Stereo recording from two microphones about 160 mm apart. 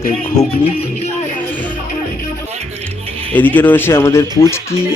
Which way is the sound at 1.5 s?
10° left (ahead or behind).